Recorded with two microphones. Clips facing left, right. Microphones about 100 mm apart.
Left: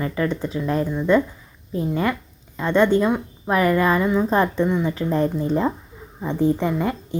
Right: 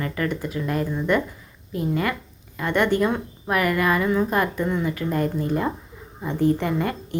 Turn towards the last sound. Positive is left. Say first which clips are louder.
# left 1 dB
turn(degrees=15)  # may be behind; listen again after turning